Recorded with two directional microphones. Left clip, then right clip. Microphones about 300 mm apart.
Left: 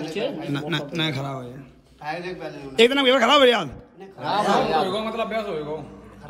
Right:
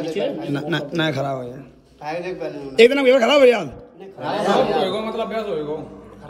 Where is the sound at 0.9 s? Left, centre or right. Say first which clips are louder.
Right 5 dB; centre.